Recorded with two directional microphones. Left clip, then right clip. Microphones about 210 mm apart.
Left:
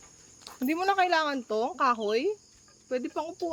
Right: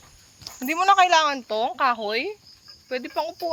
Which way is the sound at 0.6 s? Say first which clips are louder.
Right 8 dB; centre (ahead or behind).